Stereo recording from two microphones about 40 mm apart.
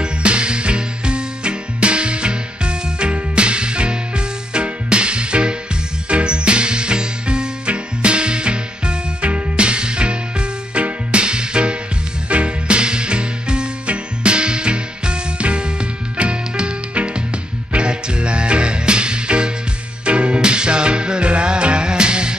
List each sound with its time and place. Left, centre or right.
0.0 s music: right